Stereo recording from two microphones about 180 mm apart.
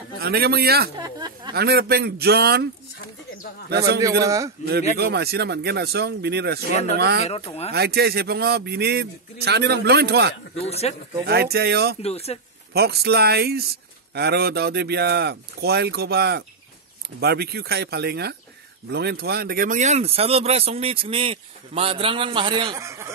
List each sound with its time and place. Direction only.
0.2 s speech: 60° right (ahead or behind)
0.9 s speech: 20° right (ahead or behind)
1.5 s speech: 60° right (ahead or behind)
3.7 s speech: 65° right (ahead or behind)
4.2 s a man's voice: 20° right (ahead or behind)
4.9 s speech: 65° right (ahead or behind)
6.7 s speech: 40° left (ahead or behind)
7.0 s speech: 60° right (ahead or behind)
10.6 s speech: 35° left (ahead or behind)
11.2 s speech: 60° right (ahead or behind)
12.0 s speech: 35° left (ahead or behind)
12.7 s speech: 60° right (ahead or behind); by 22.8 s 30° right (ahead or behind)
22.8 s speech: 15° right (ahead or behind)